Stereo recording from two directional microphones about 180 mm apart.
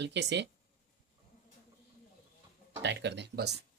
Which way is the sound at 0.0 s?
75° right (ahead or behind).